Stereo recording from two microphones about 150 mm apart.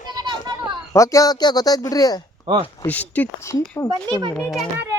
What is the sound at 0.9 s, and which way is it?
Speech, 20° left (ahead or behind).